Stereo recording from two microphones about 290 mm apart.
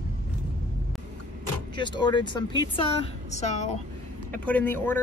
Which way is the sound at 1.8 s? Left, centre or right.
Centre.